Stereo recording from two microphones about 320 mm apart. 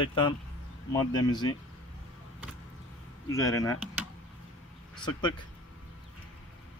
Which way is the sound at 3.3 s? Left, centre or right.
Centre.